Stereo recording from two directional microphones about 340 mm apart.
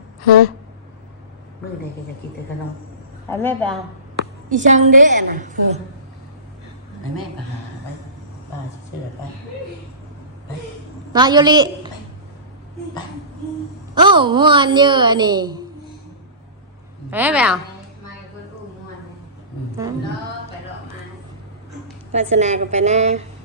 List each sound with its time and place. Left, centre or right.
3.2 s a woman's voice: centre
4.4 s a woman's voice: right
11.1 s a woman's voice: centre
13.9 s a woman's voice: centre
17.1 s a woman's voice: centre
22.1 s a woman's voice: centre